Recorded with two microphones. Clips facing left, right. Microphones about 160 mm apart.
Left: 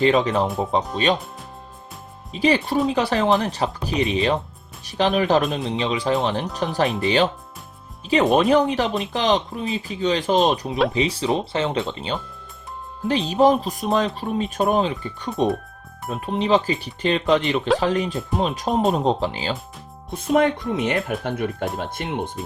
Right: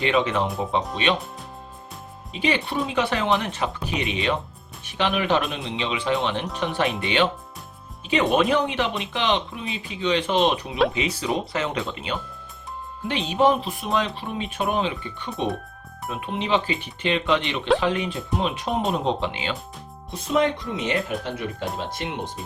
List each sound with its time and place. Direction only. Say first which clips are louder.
0.0 s speech: left 4 dB; 35° left (ahead or behind)
2.3 s speech: left 5 dB; 40° left (ahead or behind)
8.4 s speech: left 4 dB; 40° left (ahead or behind)
10.7 s speech: left 1 dB; centre (ahead or behind)
10.9 s speech: left 4 dB; 30° left (ahead or behind)
20.1 s speech: left 3 dB; 50° left (ahead or behind)